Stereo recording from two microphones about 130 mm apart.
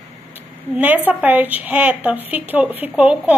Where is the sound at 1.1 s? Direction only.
15° right (ahead or behind).